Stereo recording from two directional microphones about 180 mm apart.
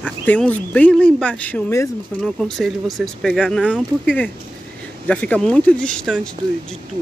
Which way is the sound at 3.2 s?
Centre (ahead or behind).